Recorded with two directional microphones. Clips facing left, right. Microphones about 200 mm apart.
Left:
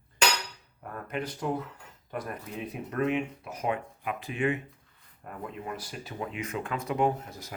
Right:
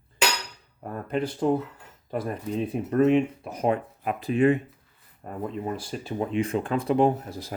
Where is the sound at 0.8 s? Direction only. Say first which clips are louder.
Right 7 dB; 30° right (ahead or behind).